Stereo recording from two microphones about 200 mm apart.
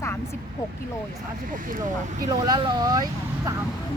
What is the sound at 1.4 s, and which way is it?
Speech, 40° right (ahead or behind).